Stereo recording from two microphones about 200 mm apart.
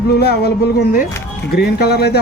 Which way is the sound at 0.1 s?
55° left (ahead or behind).